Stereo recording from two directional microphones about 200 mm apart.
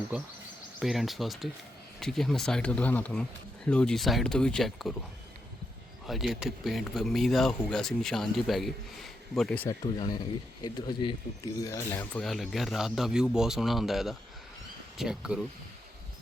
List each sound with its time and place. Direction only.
0.8 s speech: centre (ahead or behind)
6.1 s speech: centre (ahead or behind)
9.6 s speech: 20° left (ahead or behind); by 15.4 s 5° right (ahead or behind)